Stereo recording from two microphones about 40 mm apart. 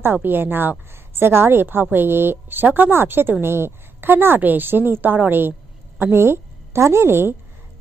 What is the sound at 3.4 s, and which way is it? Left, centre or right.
Speech, right.